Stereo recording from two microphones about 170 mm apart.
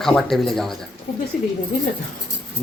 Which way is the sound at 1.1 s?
50° left (ahead or behind).